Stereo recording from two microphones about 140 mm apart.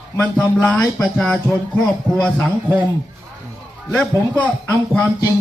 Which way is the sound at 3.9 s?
10° left (ahead or behind).